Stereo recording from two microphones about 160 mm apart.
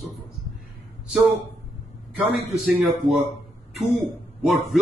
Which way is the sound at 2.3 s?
5° right (ahead or behind).